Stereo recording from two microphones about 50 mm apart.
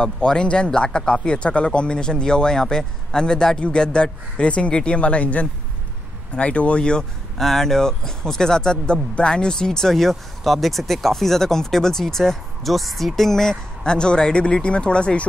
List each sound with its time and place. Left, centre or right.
0.0 s speech: centre
7.3 s speech: centre